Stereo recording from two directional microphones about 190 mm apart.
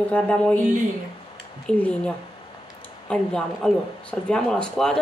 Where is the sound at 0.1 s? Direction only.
5° left (ahead or behind).